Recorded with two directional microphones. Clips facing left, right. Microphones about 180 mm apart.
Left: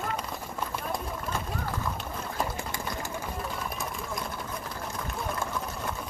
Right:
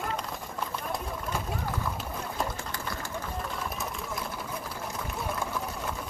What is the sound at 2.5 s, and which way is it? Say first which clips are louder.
Pigeon: left 2 dB; 15° left (ahead or behind).